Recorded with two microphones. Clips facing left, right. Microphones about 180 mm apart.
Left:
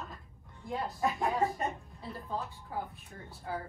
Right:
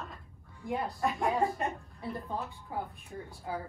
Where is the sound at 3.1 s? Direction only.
20° right (ahead or behind).